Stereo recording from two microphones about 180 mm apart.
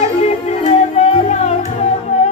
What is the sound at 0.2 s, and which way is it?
Music, 40° left (ahead or behind).